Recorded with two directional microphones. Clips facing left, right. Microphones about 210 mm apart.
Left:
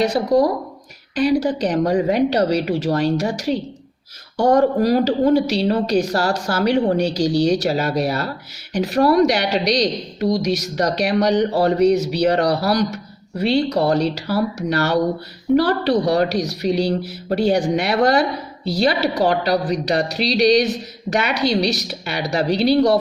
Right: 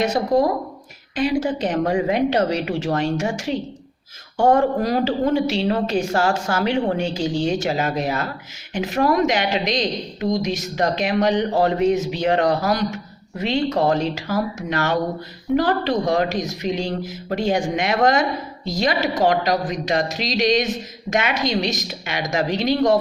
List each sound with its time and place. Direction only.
0.0 s a woman's voice: 35° left (ahead or behind)